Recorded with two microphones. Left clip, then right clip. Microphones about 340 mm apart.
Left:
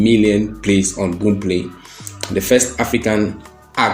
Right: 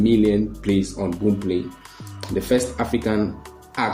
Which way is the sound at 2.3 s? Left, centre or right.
Right.